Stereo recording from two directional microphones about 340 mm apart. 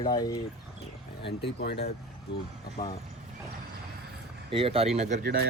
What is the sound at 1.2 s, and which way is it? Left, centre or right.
Speech, left.